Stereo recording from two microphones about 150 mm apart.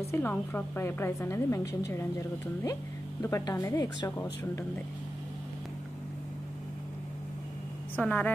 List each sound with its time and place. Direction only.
0.1 s a woman's voice: 15° left (ahead or behind)
7.9 s a woman's voice: 10° left (ahead or behind)